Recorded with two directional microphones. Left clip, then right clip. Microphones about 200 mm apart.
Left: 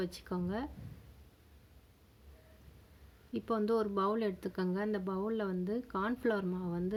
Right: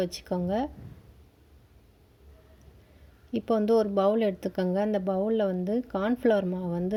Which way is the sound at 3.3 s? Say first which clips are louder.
Right 9 dB; 10° right (ahead or behind).